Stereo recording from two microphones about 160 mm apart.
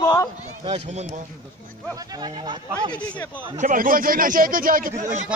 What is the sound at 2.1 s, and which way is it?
Speech, 25° right (ahead or behind).